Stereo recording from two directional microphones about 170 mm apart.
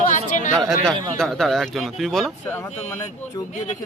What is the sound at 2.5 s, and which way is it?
Speech, 15° left (ahead or behind).